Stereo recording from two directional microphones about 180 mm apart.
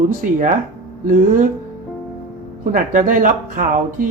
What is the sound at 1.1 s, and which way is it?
Speech, 45° right (ahead or behind).